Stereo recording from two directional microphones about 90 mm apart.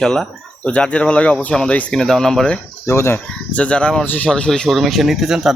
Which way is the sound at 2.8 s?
30° left (ahead or behind).